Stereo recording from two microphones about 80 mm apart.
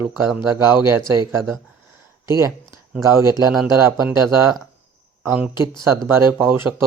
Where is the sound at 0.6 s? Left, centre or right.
Right.